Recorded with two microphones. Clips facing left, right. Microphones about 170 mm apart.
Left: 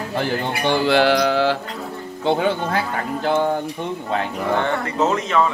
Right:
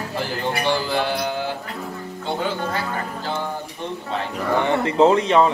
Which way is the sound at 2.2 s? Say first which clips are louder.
Left 6 dB; 65° left (ahead or behind).